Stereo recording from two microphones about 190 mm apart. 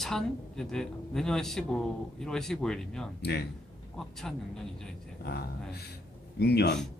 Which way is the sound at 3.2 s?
60° left (ahead or behind).